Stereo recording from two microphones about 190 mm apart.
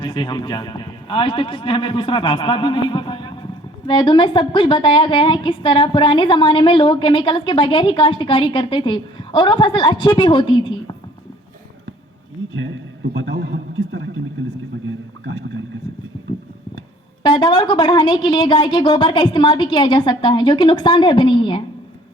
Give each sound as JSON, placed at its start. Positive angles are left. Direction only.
{"t": 0.0, "sound": "a man's voice", "side_deg": 25}
{"t": 12.5, "sound": "a sound", "side_deg": -80}
{"t": 17.2, "sound": "a man's voice", "side_deg": 20}